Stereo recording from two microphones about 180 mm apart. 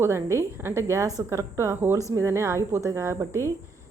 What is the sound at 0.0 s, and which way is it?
A woman's voice, 15° right (ahead or behind).